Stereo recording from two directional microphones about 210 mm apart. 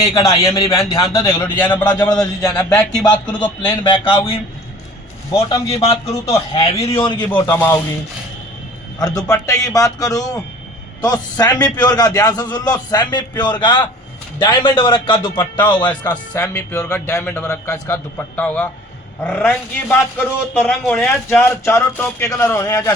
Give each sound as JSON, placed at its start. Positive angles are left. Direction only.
{"t": 0.0, "sound": "a man's voice", "side_deg": 15}
{"t": 3.7, "sound": "a man's voice", "side_deg": 25}
{"t": 7.4, "sound": "a man's voice", "side_deg": 10}
{"t": 9.0, "sound": "a man's voice", "side_deg": 15}